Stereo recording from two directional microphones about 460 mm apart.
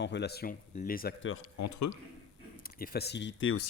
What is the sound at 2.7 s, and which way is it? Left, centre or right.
Speech, centre.